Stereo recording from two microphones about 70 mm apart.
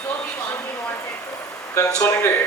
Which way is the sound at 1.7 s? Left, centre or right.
Left.